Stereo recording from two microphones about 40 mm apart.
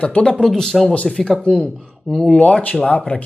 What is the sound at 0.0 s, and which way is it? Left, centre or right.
Speech, left.